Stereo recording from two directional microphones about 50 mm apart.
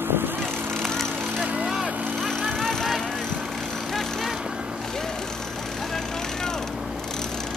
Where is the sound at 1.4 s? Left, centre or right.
Right.